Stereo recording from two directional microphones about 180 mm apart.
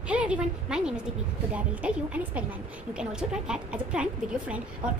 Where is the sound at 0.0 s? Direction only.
5° right (ahead or behind).